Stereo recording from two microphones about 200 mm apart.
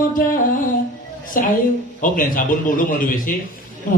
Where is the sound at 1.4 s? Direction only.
45° left (ahead or behind).